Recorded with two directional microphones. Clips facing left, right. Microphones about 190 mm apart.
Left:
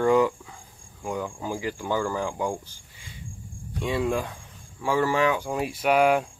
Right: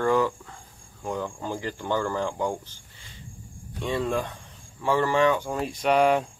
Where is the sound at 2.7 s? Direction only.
10° left (ahead or behind).